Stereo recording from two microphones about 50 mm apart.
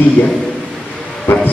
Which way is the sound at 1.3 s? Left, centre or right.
Left.